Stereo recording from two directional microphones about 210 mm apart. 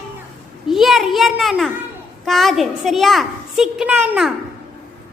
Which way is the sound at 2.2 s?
Centre (ahead or behind).